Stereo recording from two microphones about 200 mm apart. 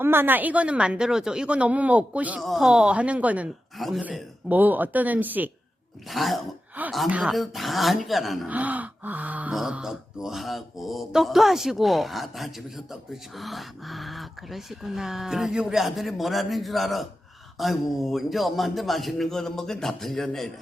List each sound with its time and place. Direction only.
0.0 s a woman's voice: 10° right (ahead or behind)